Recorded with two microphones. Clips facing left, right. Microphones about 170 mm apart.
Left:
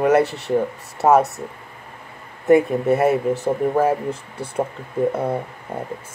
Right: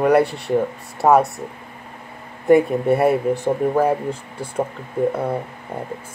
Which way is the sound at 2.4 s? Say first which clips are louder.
Right 1 dB; centre (ahead or behind).